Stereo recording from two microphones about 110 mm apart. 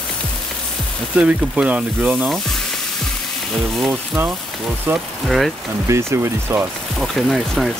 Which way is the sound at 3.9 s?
20° right (ahead or behind).